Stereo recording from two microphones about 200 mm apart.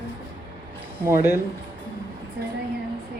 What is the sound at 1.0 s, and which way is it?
Speech, 10° right (ahead or behind).